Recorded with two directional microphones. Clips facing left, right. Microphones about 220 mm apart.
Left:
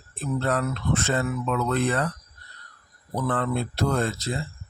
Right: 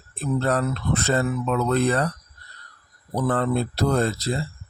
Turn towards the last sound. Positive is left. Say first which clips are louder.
# right 3 dB
turn(degrees=-35)  # may be behind; listen again after turning